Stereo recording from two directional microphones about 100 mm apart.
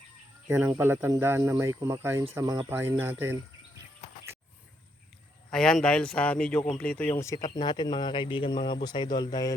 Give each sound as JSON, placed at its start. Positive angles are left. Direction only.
{"t": 0.4, "sound": "speech", "side_deg": -20}
{"t": 2.4, "sound": "speech", "side_deg": -45}
{"t": 2.6, "sound": "speech", "side_deg": -25}
{"t": 5.5, "sound": "speech", "side_deg": 5}
{"t": 7.1, "sound": "speech", "side_deg": 30}
{"t": 7.4, "sound": "speech", "side_deg": 45}